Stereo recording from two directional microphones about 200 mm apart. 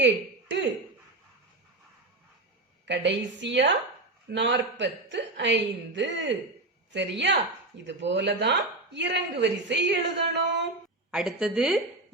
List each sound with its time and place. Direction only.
2.8 s a woman's voice: 60° right (ahead or behind)
11.1 s a woman's voice: 5° right (ahead or behind)